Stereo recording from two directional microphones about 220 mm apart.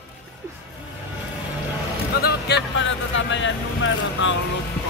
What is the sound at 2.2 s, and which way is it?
Vehicle, 50° left (ahead or behind).